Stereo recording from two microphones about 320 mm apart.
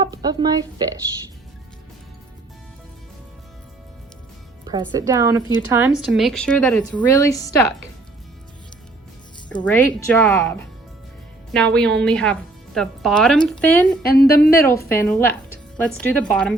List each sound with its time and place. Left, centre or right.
0.0 s a woman's voice: centre
4.6 s a woman's voice: centre
9.6 s speech: centre
14.0 s a woman's voice: left
14.7 s a woman's voice: centre